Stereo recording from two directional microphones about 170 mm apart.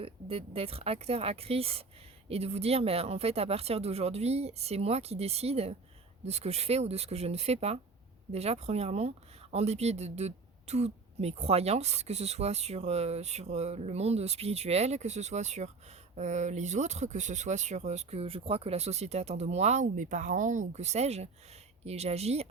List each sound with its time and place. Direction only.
0.0 s speech: 35° right (ahead or behind)